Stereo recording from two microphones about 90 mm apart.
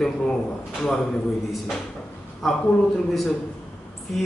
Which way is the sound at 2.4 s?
Centre (ahead or behind).